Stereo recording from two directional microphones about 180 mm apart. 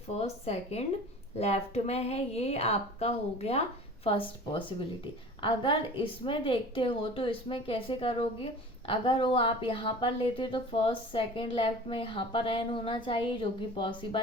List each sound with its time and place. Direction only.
0.2 s a woman's voice: 35° left (ahead or behind)